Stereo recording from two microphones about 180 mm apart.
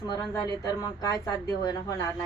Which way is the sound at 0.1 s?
20° left (ahead or behind).